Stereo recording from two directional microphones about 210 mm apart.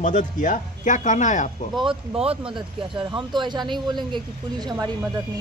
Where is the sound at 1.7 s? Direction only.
25° right (ahead or behind).